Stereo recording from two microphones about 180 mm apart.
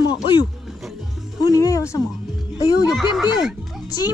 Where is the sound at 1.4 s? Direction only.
20° left (ahead or behind).